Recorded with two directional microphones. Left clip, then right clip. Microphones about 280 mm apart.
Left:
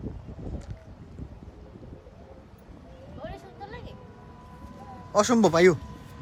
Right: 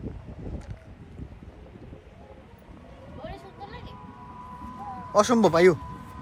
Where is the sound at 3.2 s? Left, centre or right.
Centre.